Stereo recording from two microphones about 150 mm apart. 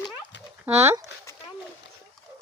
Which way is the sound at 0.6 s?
15° right (ahead or behind).